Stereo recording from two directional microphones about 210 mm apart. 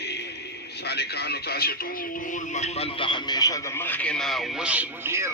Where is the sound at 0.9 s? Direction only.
50° left (ahead or behind).